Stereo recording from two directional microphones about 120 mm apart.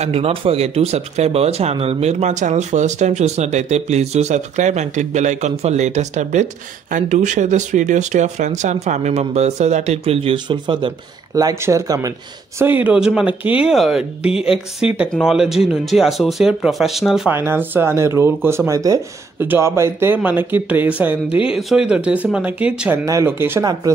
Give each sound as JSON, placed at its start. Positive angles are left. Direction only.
{"t": 0.0, "sound": "speech", "side_deg": -55}
{"t": 6.9, "sound": "speech", "side_deg": -90}
{"t": 11.3, "sound": "speech", "side_deg": -30}
{"t": 12.5, "sound": "speech", "side_deg": -15}
{"t": 15.1, "sound": "speech", "side_deg": -5}
{"t": 17.3, "sound": "speech", "side_deg": -20}
{"t": 21.5, "sound": "speech", "side_deg": -5}
{"t": 23.0, "sound": "speech", "side_deg": -20}
{"t": 23.6, "sound": "speech", "side_deg": -35}